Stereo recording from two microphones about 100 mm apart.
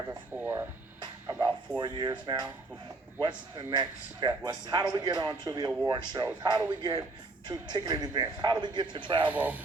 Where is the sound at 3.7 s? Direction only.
45° right (ahead or behind).